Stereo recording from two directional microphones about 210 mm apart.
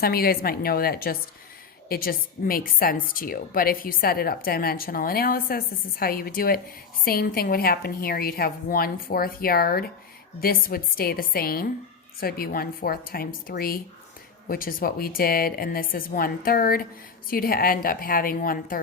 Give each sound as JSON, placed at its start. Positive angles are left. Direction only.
{"t": 0.0, "sound": "a woman's voice", "side_deg": 45}